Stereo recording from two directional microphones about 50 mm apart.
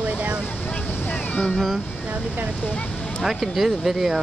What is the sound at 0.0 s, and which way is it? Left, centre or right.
Vehicle, right.